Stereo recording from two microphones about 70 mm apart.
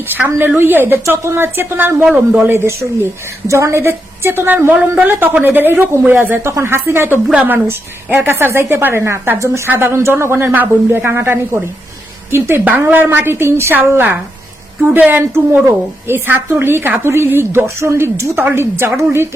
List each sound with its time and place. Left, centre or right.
0.1 s a woman's voice: right
1.0 s a woman's voice: right
3.4 s a woman's voice: right
6.4 s a woman's voice: right